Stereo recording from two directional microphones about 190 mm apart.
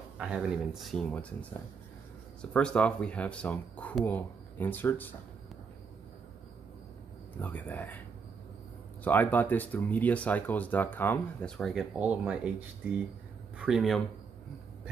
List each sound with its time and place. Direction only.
0.2 s speech: 5° right (ahead or behind)
2.5 s speech: 5° left (ahead or behind)
7.3 s speech: 10° left (ahead or behind)
9.0 s speech: 10° left (ahead or behind)